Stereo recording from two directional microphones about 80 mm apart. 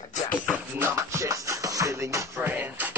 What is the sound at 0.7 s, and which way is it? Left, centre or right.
Music, right.